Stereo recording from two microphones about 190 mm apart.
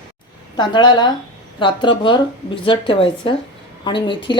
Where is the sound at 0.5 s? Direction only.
25° left (ahead or behind).